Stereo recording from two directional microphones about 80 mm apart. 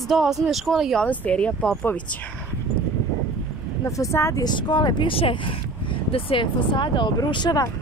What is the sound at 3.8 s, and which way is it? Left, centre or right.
Speech, left.